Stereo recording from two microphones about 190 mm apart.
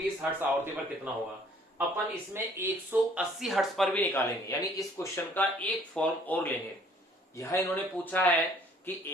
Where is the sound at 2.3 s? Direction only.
10° right (ahead or behind).